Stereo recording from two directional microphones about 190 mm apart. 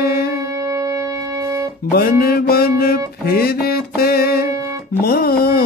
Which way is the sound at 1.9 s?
55° left (ahead or behind).